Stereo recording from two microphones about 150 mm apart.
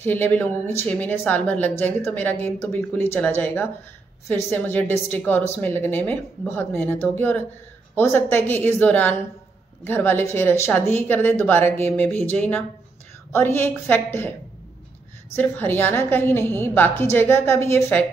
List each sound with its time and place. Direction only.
0.0 s a woman's voice: 10° left (ahead or behind)
15.3 s a woman's voice: 10° left (ahead or behind)